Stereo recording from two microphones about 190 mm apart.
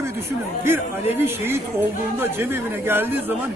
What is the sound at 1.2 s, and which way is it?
A man's voice, 10° right (ahead or behind).